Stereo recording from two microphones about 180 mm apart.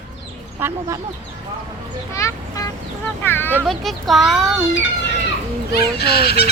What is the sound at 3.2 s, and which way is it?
Speech, 10° left (ahead or behind).